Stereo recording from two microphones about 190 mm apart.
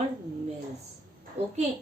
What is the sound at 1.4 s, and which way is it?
Speech, 35° right (ahead or behind).